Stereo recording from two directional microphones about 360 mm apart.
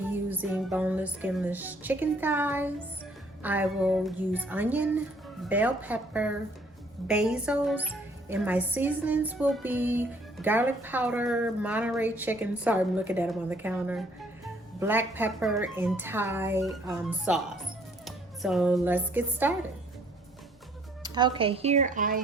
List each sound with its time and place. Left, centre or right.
0.1 s a woman's voice: centre
21.0 s speech: centre